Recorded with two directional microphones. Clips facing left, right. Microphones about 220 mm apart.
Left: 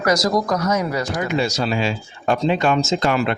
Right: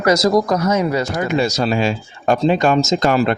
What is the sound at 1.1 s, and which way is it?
Speech, 45° right (ahead or behind).